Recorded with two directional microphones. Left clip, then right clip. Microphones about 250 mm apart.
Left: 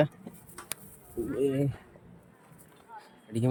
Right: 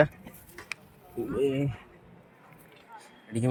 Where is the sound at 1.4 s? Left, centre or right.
Centre.